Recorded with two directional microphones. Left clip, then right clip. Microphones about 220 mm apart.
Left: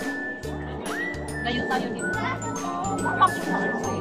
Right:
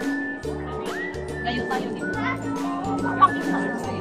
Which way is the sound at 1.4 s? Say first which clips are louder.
Even; 5° left (ahead or behind).